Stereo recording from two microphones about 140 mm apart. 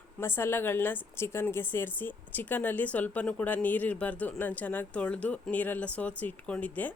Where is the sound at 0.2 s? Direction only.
15° left (ahead or behind).